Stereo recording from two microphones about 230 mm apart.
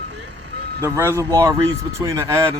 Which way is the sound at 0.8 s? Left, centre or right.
Centre.